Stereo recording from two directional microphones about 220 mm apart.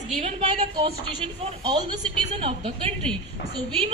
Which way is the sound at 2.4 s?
25° right (ahead or behind).